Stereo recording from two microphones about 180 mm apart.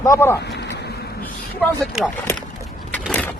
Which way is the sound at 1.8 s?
Centre (ahead or behind).